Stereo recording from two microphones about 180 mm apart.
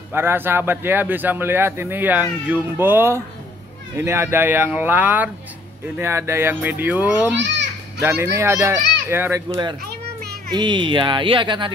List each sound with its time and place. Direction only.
0.1 s speech: 10° right (ahead or behind)
7.3 s a child's voice: 80° right
8.0 s speech: 15° right (ahead or behind)
10.5 s speech: 25° right (ahead or behind)